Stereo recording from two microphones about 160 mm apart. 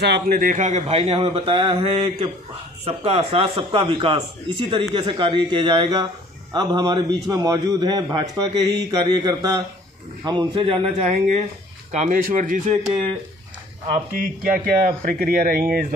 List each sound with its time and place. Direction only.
0.0 s a man's voice: 80° right; by 13.1 s 45° right (ahead or behind)
14.1 s speech: 65° right (ahead or behind)